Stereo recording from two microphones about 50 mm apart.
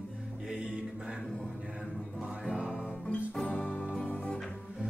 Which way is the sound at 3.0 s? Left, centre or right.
Centre.